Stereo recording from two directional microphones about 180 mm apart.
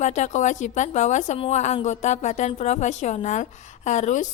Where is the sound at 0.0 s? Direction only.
40° left (ahead or behind).